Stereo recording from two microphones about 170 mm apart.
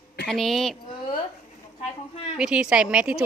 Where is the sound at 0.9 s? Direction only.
30° left (ahead or behind).